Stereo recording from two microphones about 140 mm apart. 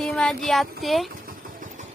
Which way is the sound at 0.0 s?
5° left (ahead or behind).